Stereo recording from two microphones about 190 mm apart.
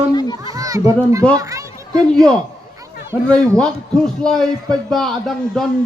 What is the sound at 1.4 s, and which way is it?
Children playing, 15° right (ahead or behind).